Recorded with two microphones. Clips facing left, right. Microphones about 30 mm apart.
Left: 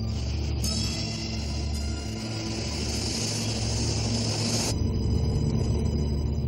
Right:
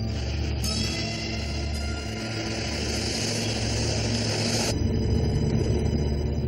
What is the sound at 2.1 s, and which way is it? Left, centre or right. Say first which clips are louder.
Vehicle: right 2 dB; right.